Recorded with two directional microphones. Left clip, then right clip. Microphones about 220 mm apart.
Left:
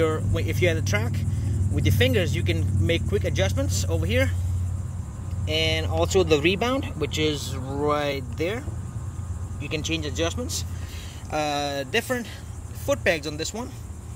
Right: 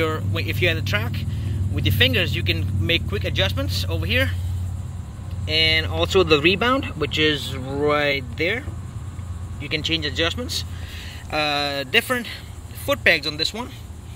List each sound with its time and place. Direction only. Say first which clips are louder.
0.0 s speech: right 1 dB; 20° left (ahead or behind)
5.5 s speech: right 6 dB; 5° left (ahead or behind)